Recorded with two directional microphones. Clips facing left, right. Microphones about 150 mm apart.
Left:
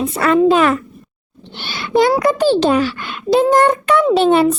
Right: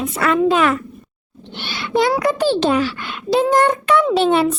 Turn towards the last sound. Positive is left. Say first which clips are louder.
# left 3 dB
turn(degrees=45)  # may be behind; listen again after turning